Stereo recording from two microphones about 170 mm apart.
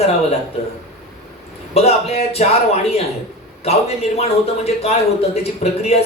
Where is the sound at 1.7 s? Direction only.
40° left (ahead or behind).